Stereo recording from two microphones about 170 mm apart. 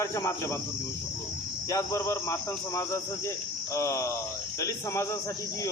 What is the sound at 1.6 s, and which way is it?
Speech, 20° left (ahead or behind).